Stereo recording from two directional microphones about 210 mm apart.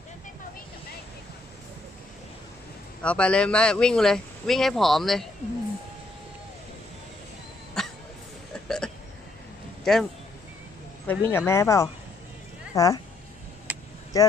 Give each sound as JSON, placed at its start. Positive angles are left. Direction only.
{"t": 3.0, "sound": "speech", "side_deg": 5}
{"t": 7.8, "sound": "cough", "side_deg": 0}
{"t": 8.6, "sound": "hiccup", "side_deg": 5}
{"t": 9.9, "sound": "speech", "side_deg": 0}
{"t": 11.1, "sound": "speech", "side_deg": 10}
{"t": 13.7, "sound": "vehicle", "side_deg": -10}
{"t": 14.1, "sound": "speech", "side_deg": 15}